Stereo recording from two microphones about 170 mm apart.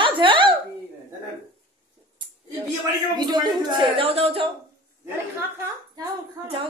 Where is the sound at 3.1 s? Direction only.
25° right (ahead or behind).